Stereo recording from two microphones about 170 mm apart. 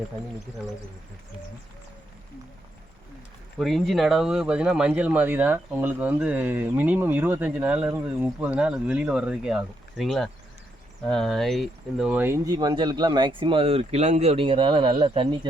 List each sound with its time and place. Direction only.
3.6 s speech: centre (ahead or behind); by 15.4 s 30° right (ahead or behind)